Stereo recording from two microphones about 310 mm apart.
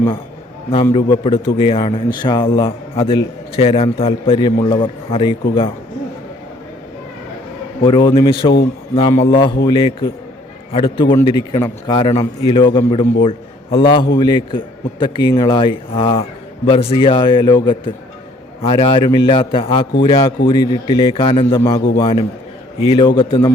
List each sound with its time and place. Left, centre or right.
0.7 s a man's voice: centre
7.9 s a man's voice: centre